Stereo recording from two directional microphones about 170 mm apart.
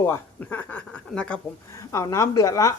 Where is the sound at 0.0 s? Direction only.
15° left (ahead or behind).